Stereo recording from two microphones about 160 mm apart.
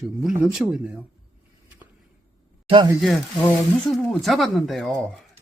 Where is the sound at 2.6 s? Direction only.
30° right (ahead or behind).